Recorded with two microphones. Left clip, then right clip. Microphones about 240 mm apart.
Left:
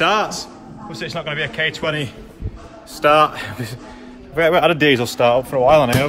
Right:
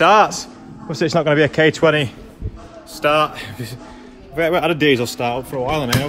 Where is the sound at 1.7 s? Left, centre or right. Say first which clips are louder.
Right 7 dB; right.